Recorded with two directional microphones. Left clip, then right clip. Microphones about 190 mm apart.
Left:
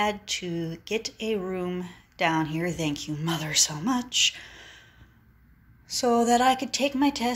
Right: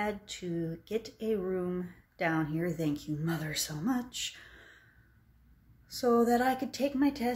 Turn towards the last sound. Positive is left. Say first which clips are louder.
# left 5 dB
turn(degrees=-10)  # may be behind; listen again after turning